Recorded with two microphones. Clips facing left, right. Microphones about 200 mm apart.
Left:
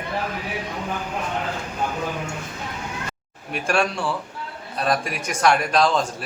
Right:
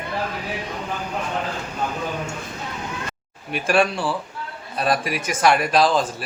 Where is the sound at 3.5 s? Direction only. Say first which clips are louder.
Right 3 dB; centre (ahead or behind).